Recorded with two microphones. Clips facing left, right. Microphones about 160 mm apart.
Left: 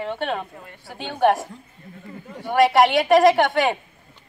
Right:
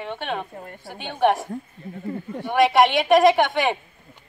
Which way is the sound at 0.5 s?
45° right (ahead or behind).